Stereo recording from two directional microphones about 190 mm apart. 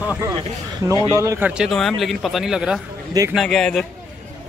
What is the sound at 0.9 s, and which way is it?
Speech, 20° left (ahead or behind).